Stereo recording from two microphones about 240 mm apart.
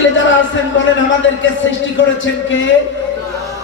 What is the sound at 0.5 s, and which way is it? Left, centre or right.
A man's voice, left.